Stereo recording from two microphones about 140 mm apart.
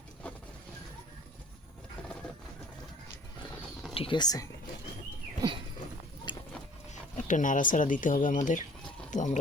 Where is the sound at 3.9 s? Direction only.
40° left (ahead or behind).